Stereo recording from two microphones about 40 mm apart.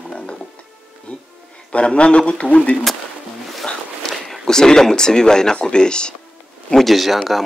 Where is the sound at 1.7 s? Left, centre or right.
Left.